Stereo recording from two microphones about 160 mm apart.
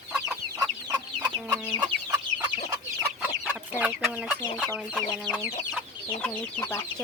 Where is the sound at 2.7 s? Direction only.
15° right (ahead or behind).